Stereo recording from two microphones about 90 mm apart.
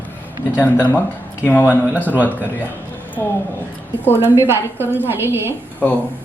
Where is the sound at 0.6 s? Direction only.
20° left (ahead or behind).